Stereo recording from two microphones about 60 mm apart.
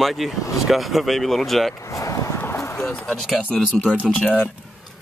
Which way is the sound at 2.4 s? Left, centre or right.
Left.